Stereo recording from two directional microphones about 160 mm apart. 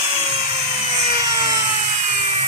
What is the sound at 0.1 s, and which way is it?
Wood, 30° right (ahead or behind).